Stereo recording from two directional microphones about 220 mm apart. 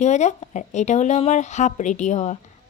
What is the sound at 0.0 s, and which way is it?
A woman's voice, 30° left (ahead or behind).